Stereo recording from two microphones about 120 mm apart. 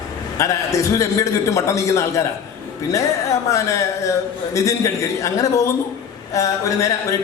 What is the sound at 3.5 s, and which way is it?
A man's voice, 25° left (ahead or behind).